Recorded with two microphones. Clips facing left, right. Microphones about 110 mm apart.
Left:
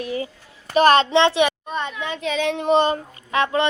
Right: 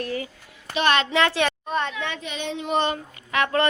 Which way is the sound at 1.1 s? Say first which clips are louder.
Left 5 dB; 25° left (ahead or behind).